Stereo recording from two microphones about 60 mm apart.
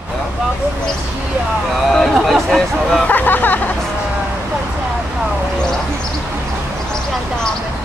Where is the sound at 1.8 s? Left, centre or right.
Centre.